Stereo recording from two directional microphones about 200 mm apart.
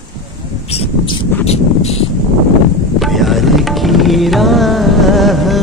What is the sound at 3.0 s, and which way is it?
Carnatic music, centre (ahead or behind).